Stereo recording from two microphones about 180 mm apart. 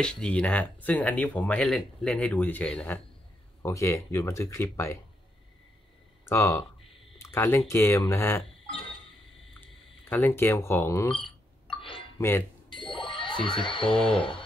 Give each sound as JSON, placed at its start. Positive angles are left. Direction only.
{"t": 0.0, "sound": "speech", "side_deg": 5}
{"t": 6.2, "sound": "speech", "side_deg": 15}
{"t": 9.5, "sound": "speech", "side_deg": 10}
{"t": 11.7, "sound": "music", "side_deg": 30}
{"t": 12.2, "sound": "speech", "side_deg": 15}
{"t": 12.6, "sound": "bicycle bell", "side_deg": 25}